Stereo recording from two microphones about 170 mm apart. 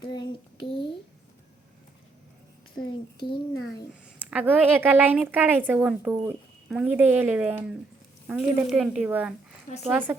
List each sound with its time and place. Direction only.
0.0 s a sound: 25° left (ahead or behind)
2.7 s a child's voice: 25° left (ahead or behind)
4.2 s a woman's voice: 10° right (ahead or behind)